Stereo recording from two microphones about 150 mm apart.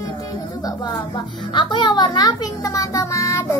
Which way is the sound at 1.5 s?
30° left (ahead or behind).